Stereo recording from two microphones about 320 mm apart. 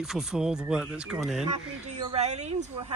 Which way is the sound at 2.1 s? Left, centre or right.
Right.